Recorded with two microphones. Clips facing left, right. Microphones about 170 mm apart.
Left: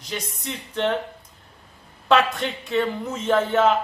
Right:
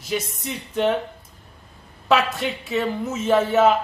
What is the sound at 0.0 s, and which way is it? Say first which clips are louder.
Speech: right 5 dB; 5° right (ahead or behind).